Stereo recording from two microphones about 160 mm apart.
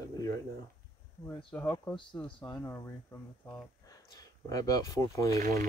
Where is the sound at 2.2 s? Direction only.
30° left (ahead or behind).